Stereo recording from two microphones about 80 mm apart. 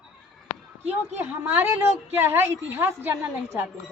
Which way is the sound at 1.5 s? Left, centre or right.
Right.